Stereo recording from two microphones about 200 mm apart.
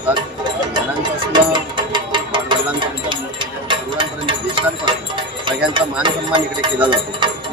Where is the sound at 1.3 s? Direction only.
25° right (ahead or behind).